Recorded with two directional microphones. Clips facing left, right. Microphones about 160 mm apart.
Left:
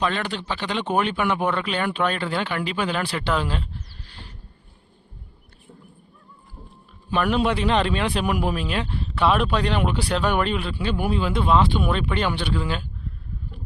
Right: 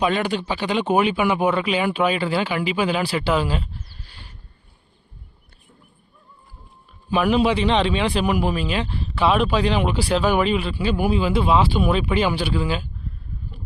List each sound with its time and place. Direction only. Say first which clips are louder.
0.0 s speech: right 4 dB; 10° right (ahead or behind)
7.1 s speech: right 3 dB; 5° right (ahead or behind)